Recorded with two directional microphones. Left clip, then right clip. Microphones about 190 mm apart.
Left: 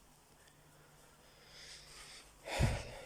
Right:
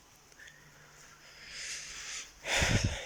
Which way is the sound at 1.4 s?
15° left (ahead or behind).